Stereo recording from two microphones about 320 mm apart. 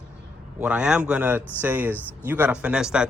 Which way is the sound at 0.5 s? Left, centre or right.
Centre.